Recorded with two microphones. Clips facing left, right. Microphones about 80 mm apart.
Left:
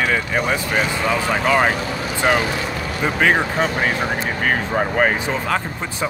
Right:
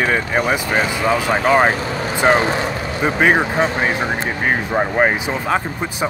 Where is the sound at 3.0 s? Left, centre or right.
Centre.